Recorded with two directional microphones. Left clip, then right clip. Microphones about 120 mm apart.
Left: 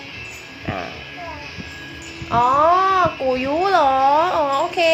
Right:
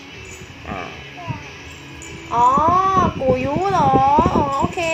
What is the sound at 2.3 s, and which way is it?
Babbling, 20° left (ahead or behind).